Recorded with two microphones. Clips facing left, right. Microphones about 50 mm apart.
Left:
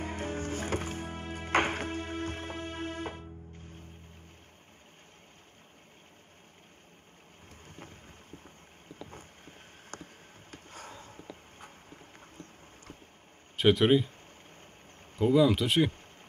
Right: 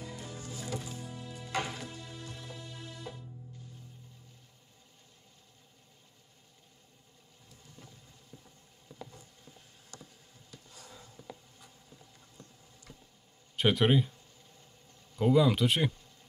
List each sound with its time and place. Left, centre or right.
0.0 s music: left
7.6 s boat: left
8.9 s a sound: left
10.5 s walk: left
13.6 s speech: centre
15.3 s speech: centre